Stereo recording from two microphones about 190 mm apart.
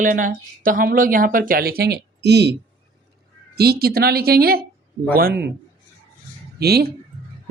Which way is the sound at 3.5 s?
55° right (ahead or behind).